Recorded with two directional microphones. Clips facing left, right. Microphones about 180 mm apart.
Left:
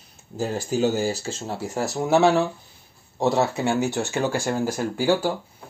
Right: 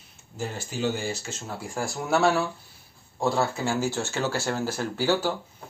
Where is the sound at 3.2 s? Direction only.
20° left (ahead or behind).